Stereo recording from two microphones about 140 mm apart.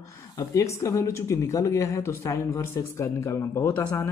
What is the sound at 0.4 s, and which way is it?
Speech, 20° left (ahead or behind).